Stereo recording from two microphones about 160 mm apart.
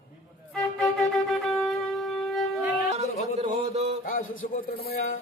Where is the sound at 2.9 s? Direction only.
45° right (ahead or behind).